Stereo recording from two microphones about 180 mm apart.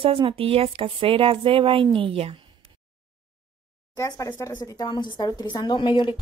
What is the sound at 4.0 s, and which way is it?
Speech, 20° left (ahead or behind).